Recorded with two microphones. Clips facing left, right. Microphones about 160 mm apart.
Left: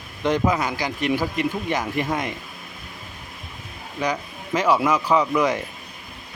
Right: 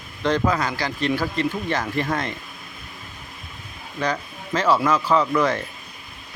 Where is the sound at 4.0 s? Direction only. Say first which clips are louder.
Even; 15° left (ahead or behind).